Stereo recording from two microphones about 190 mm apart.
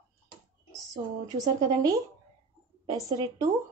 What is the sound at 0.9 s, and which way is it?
A woman's voice, 20° right (ahead or behind).